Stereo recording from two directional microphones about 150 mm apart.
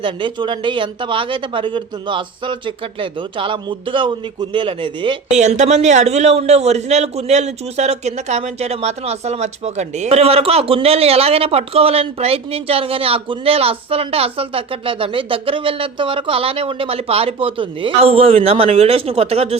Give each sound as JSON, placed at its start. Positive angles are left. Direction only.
{"t": 0.0, "sound": "a man's voice", "side_deg": -30}
{"t": 5.3, "sound": "a man's voice", "side_deg": -50}